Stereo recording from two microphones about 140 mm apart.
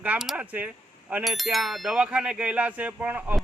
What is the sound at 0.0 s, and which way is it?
Speech, 5° right (ahead or behind).